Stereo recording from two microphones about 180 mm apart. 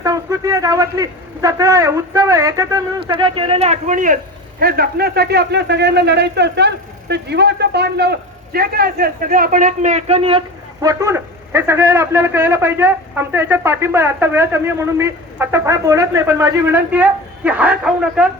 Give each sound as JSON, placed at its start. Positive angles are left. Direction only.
{"t": 0.0, "sound": "speech", "side_deg": -15}
{"t": 4.6, "sound": "speech", "side_deg": -60}
{"t": 10.8, "sound": "a man's voice", "side_deg": -15}